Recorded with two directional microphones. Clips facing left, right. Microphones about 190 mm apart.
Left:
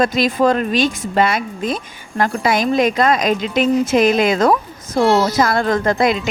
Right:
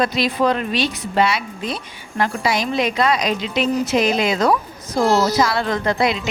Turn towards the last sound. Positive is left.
turn(degrees=50)  # may be behind; listen again after turning